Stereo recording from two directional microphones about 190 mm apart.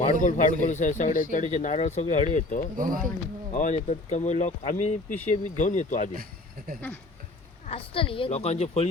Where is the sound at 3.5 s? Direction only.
40° left (ahead or behind).